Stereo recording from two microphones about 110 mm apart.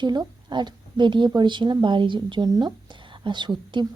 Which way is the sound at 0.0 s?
40° right (ahead or behind).